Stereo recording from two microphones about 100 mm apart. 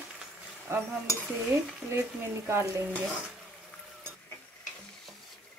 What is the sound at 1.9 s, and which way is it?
Speech, 25° right (ahead or behind).